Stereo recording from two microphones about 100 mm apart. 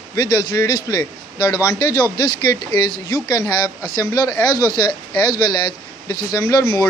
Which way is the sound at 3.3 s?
40° left (ahead or behind).